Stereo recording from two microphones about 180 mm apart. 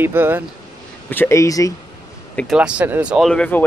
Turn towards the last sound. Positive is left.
turn(degrees=5)  # may be behind; listen again after turning